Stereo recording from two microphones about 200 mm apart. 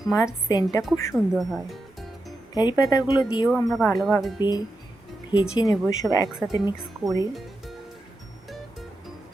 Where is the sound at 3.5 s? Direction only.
Centre (ahead or behind).